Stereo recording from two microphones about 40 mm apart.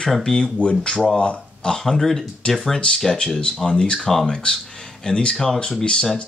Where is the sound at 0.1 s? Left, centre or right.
Centre.